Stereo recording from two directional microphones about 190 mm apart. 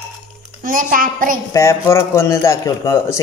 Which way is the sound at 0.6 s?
45° right (ahead or behind).